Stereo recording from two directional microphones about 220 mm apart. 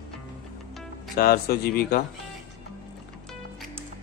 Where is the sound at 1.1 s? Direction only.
45° left (ahead or behind).